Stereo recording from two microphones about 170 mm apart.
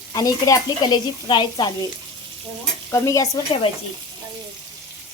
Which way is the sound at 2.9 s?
20° left (ahead or behind).